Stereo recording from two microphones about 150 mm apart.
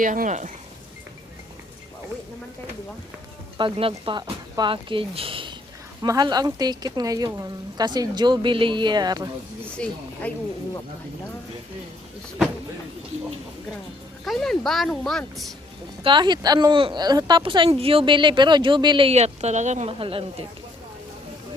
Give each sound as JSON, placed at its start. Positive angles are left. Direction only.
{"t": 0.0, "sound": "speech", "side_deg": -60}
{"t": 3.6, "sound": "a woman's voice", "side_deg": -35}
{"t": 9.7, "sound": "speech", "side_deg": 5}
{"t": 14.3, "sound": "speech", "side_deg": 0}
{"t": 16.0, "sound": "speech", "side_deg": -30}